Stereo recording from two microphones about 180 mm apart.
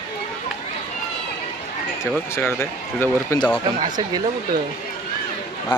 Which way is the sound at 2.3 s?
15° left (ahead or behind).